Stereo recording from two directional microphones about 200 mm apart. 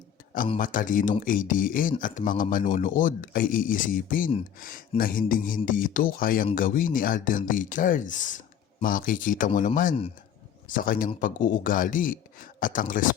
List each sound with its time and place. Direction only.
0.6 s speech: 40° left (ahead or behind)